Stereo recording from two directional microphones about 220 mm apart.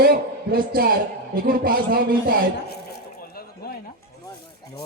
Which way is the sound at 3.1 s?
45° left (ahead or behind).